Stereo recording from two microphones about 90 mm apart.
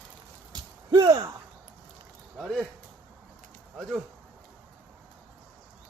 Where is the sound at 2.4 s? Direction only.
Centre (ahead or behind).